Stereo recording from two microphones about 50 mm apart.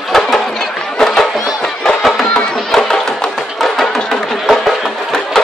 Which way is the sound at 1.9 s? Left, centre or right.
Centre.